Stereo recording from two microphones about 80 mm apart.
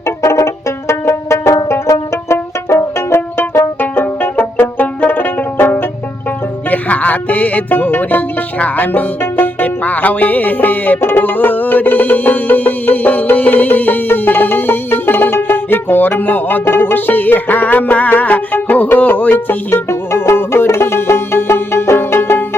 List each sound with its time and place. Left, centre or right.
0.2 s banjo: left
4.8 s music: left